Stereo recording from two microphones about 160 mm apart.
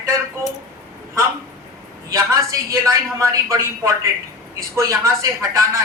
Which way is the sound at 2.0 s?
20° right (ahead or behind).